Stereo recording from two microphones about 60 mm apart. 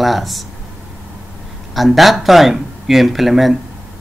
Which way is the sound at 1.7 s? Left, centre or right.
Centre.